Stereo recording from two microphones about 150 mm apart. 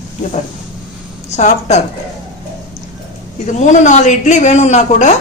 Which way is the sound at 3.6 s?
50° left (ahead or behind).